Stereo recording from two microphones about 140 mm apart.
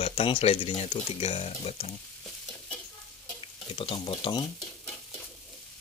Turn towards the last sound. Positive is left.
turn(degrees=30)  # may be behind; listen again after turning